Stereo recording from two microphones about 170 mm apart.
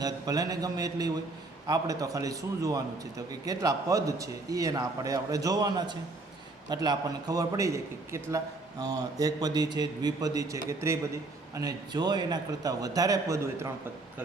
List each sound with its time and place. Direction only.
0.0 s speech: 20° right (ahead or behind)